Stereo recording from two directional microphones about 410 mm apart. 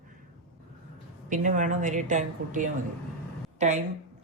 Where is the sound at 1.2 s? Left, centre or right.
Centre.